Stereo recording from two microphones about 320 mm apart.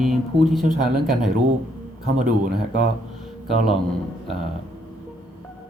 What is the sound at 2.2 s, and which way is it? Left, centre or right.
Speech, right.